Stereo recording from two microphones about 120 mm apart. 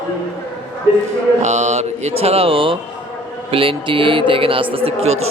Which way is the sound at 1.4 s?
75° right (ahead or behind).